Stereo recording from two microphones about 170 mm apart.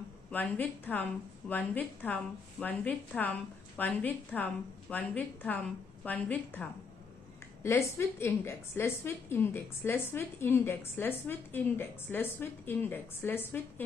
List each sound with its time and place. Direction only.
0.3 s a woman's voice: 10° left (ahead or behind)